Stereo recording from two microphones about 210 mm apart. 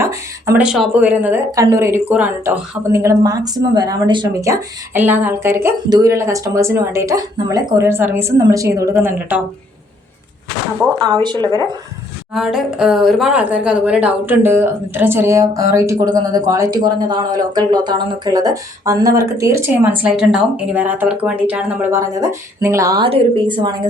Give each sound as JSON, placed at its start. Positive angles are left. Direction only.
{"t": 0.0, "sound": "speech", "side_deg": -15}
{"t": 10.9, "sound": "speech", "side_deg": -20}
{"t": 12.3, "sound": "speech", "side_deg": 0}